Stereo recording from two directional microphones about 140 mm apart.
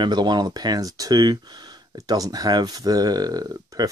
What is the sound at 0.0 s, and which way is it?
Speech, 30° right (ahead or behind).